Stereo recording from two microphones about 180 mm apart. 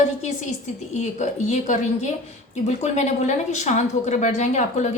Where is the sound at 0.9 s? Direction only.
40° left (ahead or behind).